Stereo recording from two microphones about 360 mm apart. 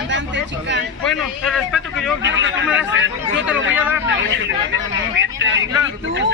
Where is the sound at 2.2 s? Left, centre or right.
Right.